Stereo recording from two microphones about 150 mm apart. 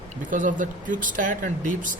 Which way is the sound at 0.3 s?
60° right (ahead or behind).